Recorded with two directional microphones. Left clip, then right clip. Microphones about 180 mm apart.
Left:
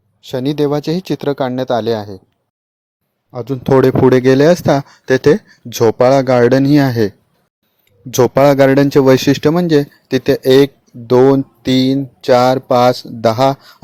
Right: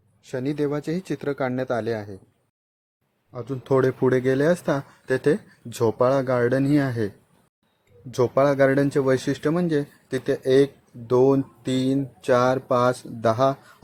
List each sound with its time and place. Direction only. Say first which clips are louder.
0.2 s speech: left 10 dB; 30° left (ahead or behind)
3.3 s speech: left 10 dB; 30° left (ahead or behind)
8.1 s speech: left 10 dB; 40° left (ahead or behind)